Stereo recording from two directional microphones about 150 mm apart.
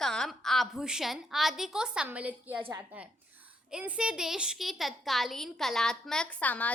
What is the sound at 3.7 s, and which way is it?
A woman's voice, 5° right (ahead or behind).